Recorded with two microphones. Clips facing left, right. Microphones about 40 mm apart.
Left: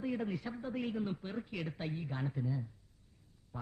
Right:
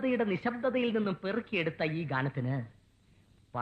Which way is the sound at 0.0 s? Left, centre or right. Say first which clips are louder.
Right 8 dB; right.